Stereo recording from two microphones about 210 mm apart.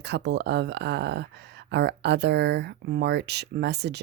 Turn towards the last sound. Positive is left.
turn(degrees=-55)  # may be behind; listen again after turning